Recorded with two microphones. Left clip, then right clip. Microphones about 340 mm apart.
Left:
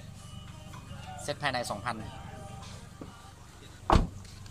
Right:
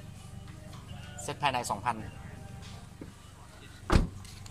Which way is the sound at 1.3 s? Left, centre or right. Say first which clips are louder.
Right 2 dB; centre.